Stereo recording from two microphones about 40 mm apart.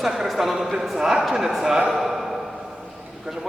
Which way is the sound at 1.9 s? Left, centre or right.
Centre.